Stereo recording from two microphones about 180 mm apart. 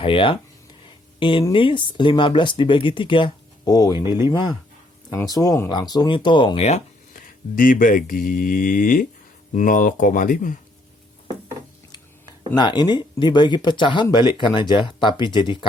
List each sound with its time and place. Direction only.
0.0 s speech: 30° left (ahead or behind)
5.1 s speech: 20° left (ahead or behind); by 10.6 s 50° left (ahead or behind)
12.5 s speech: 25° left (ahead or behind)